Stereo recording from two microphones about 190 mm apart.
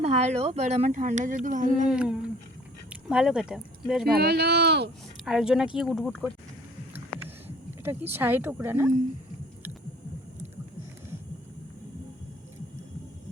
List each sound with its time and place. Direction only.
0.0 s speech: 35° right (ahead or behind)
1.9 s speech: 5° right (ahead or behind)
4.1 s speech: 60° right (ahead or behind)
5.2 s speech: centre (ahead or behind)
7.2 s a sound: 10° right (ahead or behind)